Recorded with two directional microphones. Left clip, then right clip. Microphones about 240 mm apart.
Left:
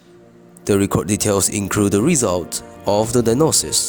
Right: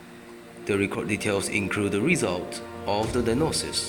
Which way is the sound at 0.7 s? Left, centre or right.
Left.